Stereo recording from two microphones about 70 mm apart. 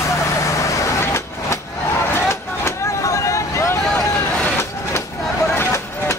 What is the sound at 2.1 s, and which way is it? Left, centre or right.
Vehicle, left.